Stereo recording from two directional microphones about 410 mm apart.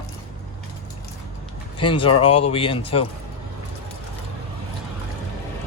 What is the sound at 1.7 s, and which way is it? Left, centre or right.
Speech, centre.